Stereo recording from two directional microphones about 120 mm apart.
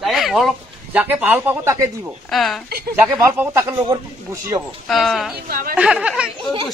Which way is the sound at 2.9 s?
15° right (ahead or behind).